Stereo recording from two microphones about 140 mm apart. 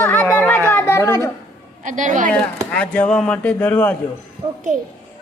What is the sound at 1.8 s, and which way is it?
Speech, 65° right (ahead or behind).